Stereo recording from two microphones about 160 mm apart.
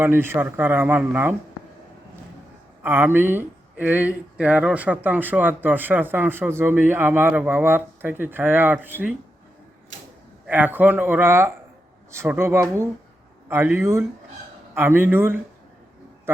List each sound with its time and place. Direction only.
0.0 s speech: 15° right (ahead or behind)
2.8 s speech: 15° right (ahead or behind)
10.4 s speech: 10° right (ahead or behind)